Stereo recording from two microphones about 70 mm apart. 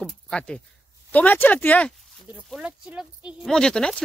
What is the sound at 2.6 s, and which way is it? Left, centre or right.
Speech, centre.